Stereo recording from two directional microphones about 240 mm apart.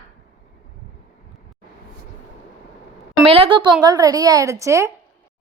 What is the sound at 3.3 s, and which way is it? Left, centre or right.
A woman's voice, right.